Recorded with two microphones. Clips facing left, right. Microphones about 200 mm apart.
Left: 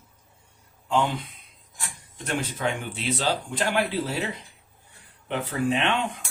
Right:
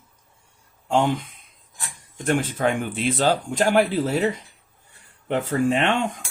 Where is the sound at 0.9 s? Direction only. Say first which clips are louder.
Right 4 dB; 45° right (ahead or behind).